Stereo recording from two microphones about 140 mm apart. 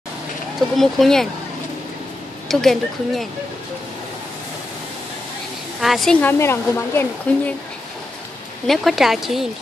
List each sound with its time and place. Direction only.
0.7 s speech: centre (ahead or behind)
2.4 s speech: centre (ahead or behind)
5.8 s speech: centre (ahead or behind)
6.2 s speech: 15° left (ahead or behind)
8.6 s speech: centre (ahead or behind)